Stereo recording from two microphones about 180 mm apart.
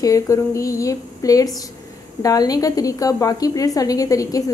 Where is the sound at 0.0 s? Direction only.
15° left (ahead or behind).